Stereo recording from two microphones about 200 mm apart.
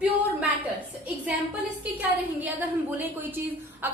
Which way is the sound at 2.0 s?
10° right (ahead or behind).